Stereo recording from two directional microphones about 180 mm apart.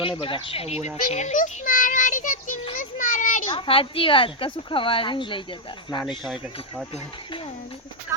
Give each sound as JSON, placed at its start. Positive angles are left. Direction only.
{"t": 0.0, "sound": "speech", "side_deg": 30}
{"t": 1.1, "sound": "child singing", "side_deg": 40}
{"t": 2.7, "sound": "a sound", "side_deg": 50}
{"t": 3.5, "sound": "a woman's voice", "side_deg": 30}
{"t": 6.1, "sound": "speech", "side_deg": -5}
{"t": 6.9, "sound": "a woman's voice", "side_deg": 30}